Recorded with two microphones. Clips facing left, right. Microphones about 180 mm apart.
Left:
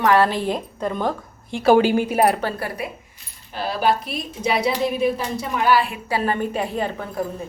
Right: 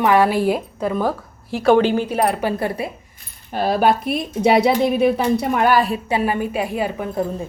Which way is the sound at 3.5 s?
50° right (ahead or behind).